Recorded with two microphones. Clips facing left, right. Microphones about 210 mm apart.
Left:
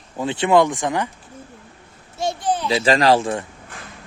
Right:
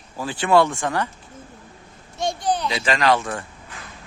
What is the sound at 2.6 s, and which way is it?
Speech, 35° left (ahead or behind).